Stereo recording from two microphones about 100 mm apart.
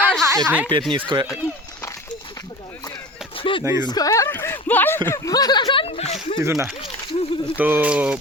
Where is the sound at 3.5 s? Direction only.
55° left (ahead or behind).